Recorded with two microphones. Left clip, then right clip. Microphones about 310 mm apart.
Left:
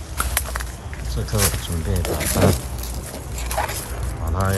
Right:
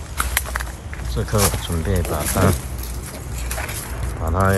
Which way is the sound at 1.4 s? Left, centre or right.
Centre.